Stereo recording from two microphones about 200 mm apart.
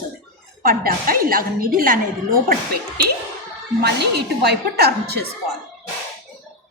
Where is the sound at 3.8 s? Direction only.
55° right (ahead or behind).